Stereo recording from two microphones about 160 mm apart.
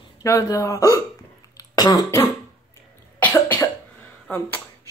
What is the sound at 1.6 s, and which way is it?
Cough, 20° left (ahead or behind).